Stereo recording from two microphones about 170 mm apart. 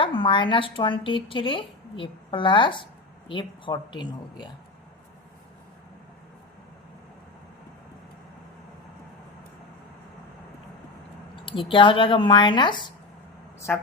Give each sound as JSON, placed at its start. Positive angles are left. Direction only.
{"t": 0.0, "sound": "speech", "side_deg": 30}
{"t": 11.4, "sound": "speech", "side_deg": 30}
{"t": 13.7, "sound": "a woman's voice", "side_deg": 5}